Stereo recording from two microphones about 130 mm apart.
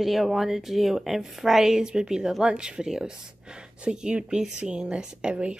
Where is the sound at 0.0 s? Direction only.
Centre (ahead or behind).